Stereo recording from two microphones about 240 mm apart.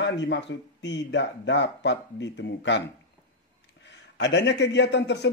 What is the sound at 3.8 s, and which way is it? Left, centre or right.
Speech, left.